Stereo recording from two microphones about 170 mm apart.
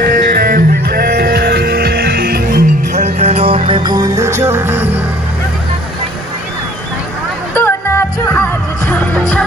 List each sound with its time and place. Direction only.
0.0 s music: 60° right (ahead or behind)
2.9 s music: 40° right (ahead or behind); by 4.8 s 15° right (ahead or behind)
7.5 s music: 15° left (ahead or behind)